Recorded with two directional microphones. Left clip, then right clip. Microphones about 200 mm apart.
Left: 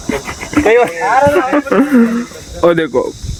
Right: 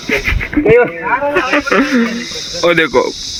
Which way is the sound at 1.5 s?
20° left (ahead or behind).